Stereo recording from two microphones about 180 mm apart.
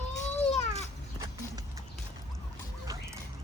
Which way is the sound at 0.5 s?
40° left (ahead or behind).